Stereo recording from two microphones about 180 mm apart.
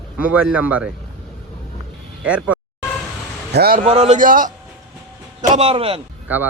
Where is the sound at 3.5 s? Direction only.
60° right (ahead or behind).